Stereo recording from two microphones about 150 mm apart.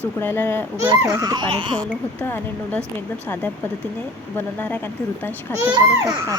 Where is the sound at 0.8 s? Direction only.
20° right (ahead or behind).